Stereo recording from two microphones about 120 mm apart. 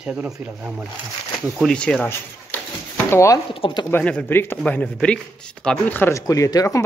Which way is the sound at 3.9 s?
15° left (ahead or behind).